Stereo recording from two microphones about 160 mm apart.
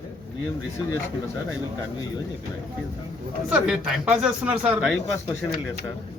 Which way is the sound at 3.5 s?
5° right (ahead or behind).